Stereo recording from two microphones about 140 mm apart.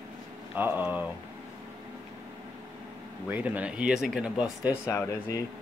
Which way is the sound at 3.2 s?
10° right (ahead or behind).